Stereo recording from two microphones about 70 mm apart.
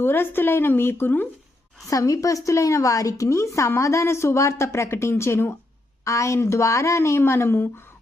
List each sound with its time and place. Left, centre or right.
0.0 s speech: left
1.9 s a woman's voice: left